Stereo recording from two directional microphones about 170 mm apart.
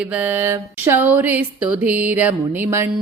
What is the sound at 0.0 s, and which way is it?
Speech, 10° right (ahead or behind).